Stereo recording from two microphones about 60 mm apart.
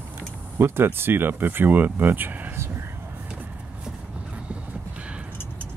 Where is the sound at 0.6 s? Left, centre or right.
Right.